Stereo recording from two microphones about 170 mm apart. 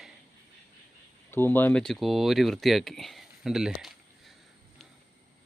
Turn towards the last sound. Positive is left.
turn(degrees=-5)  # may be behind; listen again after turning